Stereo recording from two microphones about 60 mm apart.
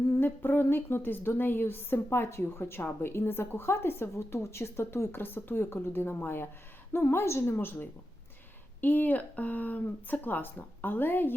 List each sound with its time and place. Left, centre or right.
0.2 s a woman's voice: left